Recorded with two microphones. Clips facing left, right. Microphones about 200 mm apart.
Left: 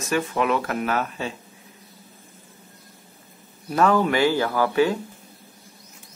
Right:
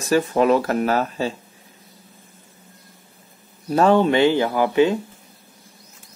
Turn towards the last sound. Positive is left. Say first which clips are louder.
# right 3 dB
turn(degrees=-20)  # may be behind; listen again after turning